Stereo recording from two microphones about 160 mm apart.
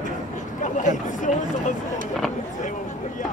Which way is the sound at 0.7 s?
50° left (ahead or behind).